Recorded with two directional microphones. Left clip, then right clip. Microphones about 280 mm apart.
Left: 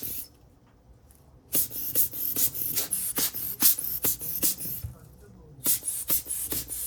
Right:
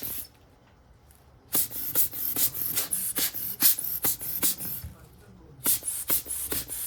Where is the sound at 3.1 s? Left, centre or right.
Centre.